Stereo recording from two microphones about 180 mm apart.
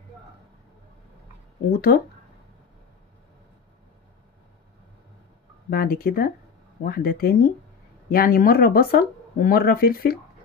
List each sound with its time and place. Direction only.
1.9 s speech: 60° left (ahead or behind)
5.7 s speech: 55° left (ahead or behind)